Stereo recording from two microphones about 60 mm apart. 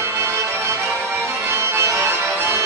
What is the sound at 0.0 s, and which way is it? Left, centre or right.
Music, right.